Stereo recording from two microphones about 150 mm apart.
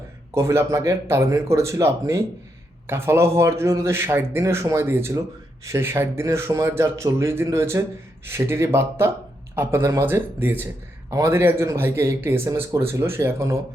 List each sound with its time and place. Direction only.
0.3 s speech: 20° right (ahead or behind)